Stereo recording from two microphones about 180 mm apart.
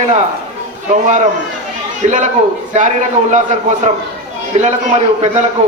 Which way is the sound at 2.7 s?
45° right (ahead or behind).